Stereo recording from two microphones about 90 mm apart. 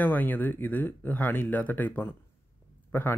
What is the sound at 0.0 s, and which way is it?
Speech, 20° left (ahead or behind).